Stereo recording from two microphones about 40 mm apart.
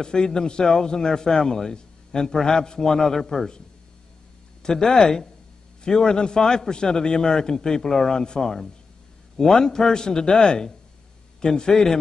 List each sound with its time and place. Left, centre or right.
0.0 s speech: centre
4.6 s speech: centre